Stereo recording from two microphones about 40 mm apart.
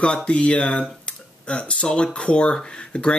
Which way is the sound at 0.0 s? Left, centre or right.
Left.